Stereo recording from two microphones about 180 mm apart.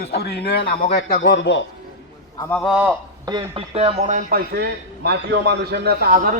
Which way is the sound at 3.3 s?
30° right (ahead or behind).